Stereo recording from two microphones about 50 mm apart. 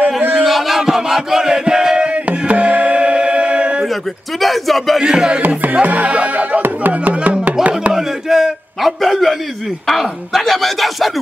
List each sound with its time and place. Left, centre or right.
0.4 s chant: centre
2.2 s music: right
4.4 s speech: centre
5.0 s music: centre
5.4 s music: right
7.9 s a sound: centre
9.8 s speech: centre